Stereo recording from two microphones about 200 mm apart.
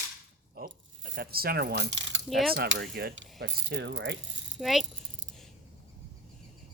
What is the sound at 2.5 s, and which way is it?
Speech, 65° right (ahead or behind).